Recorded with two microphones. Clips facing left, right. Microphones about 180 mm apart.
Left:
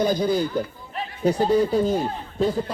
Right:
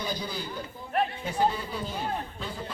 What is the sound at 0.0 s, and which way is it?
Speech, 45° left (ahead or behind).